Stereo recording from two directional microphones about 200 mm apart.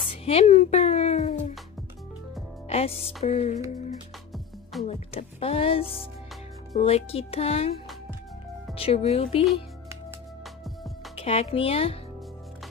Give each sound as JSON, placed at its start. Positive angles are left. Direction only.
{"t": 0.0, "sound": "music", "side_deg": 30}
{"t": 2.7, "sound": "speech", "side_deg": 30}
{"t": 3.3, "sound": "music", "side_deg": 35}
{"t": 4.8, "sound": "speech", "side_deg": 30}
{"t": 8.7, "sound": "speech", "side_deg": 30}
{"t": 11.1, "sound": "speech", "side_deg": 30}